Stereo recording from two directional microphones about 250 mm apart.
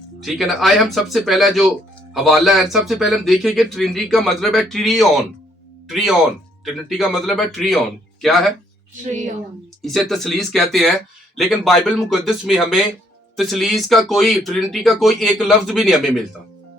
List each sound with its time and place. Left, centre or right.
0.2 s speech: centre
9.8 s speech: centre